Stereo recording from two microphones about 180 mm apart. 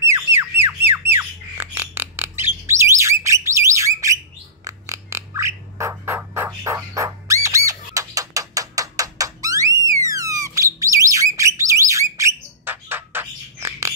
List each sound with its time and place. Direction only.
0.0 s squawk: 15° right (ahead or behind)
1.1 s bird: 10° right (ahead or behind)